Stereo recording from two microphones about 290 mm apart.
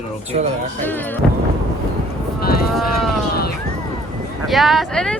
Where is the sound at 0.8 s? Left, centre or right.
Centre.